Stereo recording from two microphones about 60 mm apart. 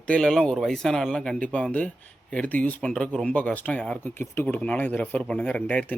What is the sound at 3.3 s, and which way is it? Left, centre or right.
Speech, left.